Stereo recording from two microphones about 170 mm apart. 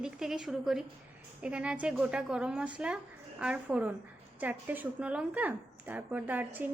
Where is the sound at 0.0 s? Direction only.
5° right (ahead or behind).